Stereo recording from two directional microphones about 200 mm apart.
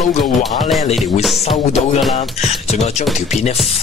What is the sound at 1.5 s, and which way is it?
Speech, 30° left (ahead or behind).